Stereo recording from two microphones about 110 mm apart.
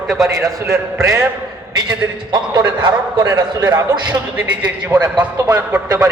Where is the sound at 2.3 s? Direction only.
40° right (ahead or behind).